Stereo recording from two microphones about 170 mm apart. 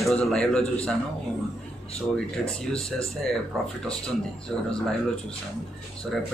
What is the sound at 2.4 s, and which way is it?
Speech, centre (ahead or behind).